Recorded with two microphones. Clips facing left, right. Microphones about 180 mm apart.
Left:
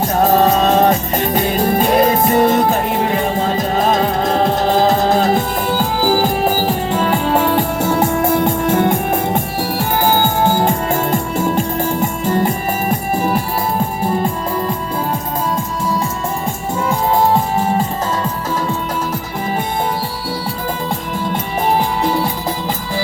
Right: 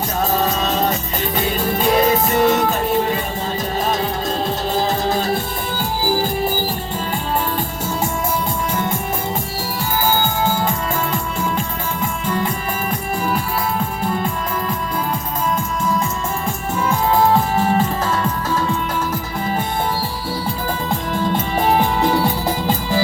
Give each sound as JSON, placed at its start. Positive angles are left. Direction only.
{"t": 0.2, "sound": "music", "side_deg": 50}